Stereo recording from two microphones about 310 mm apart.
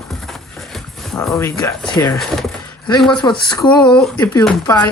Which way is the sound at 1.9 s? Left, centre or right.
Centre.